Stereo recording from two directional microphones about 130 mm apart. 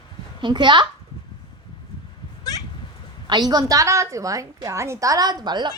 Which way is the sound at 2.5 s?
30° left (ahead or behind).